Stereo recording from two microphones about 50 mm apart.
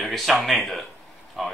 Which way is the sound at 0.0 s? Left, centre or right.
Centre.